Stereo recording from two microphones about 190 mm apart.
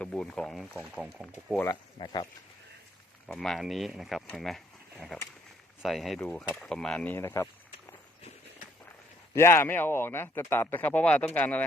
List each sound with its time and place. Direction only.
0.0 s speech: 5° left (ahead or behind)
1.5 s speech: 20° left (ahead or behind)
3.2 s speech: 5° left (ahead or behind)
9.3 s speech: 15° left (ahead or behind)